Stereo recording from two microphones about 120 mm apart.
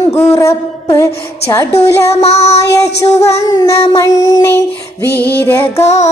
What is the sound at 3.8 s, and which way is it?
Music, 25° left (ahead or behind).